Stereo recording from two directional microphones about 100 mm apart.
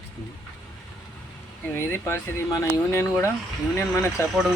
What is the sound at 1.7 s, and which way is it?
Speech, 25° left (ahead or behind).